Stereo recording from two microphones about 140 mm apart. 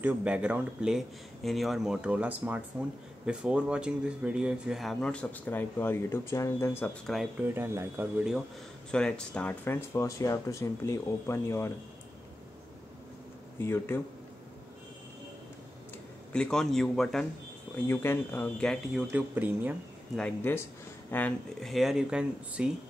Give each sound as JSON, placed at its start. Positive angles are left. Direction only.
{"t": 0.0, "sound": "speech", "side_deg": -10}
{"t": 7.4, "sound": "speech", "side_deg": -15}
{"t": 8.9, "sound": "speech", "side_deg": 5}
{"t": 13.6, "sound": "speech", "side_deg": 15}
{"t": 16.3, "sound": "speech", "side_deg": 5}
{"t": 17.7, "sound": "speech", "side_deg": 15}
{"t": 18.9, "sound": "speech", "side_deg": -10}
{"t": 20.2, "sound": "speech", "side_deg": 10}
{"t": 21.5, "sound": "speech", "side_deg": 0}